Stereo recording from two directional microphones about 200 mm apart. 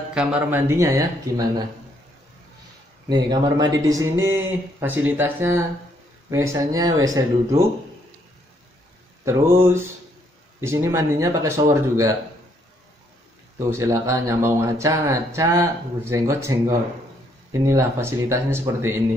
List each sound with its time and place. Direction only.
0.1 s speech: 5° right (ahead or behind)
3.1 s speech: 20° right (ahead or behind)
9.2 s speech: 15° right (ahead or behind)
13.6 s speech: 15° right (ahead or behind)